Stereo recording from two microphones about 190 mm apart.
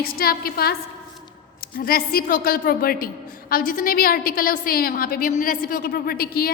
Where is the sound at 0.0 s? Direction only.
50° left (ahead or behind).